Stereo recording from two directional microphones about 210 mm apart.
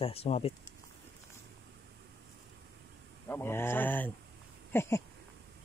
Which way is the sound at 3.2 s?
10° left (ahead or behind).